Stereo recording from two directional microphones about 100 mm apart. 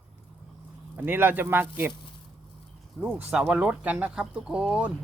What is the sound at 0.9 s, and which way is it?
Speech, 20° right (ahead or behind).